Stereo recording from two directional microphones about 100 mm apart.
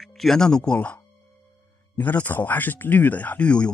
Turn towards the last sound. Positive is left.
turn(degrees=10)  # may be behind; listen again after turning